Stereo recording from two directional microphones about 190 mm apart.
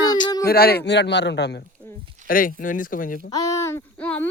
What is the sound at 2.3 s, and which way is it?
Speech, 45° left (ahead or behind).